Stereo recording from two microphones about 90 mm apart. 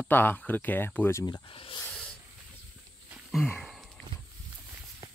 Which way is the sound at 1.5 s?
90° left.